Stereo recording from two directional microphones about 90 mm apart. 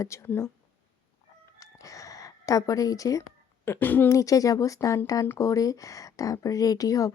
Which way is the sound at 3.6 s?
25° left (ahead or behind).